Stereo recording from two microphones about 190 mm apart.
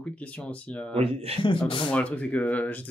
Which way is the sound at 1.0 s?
30° right (ahead or behind).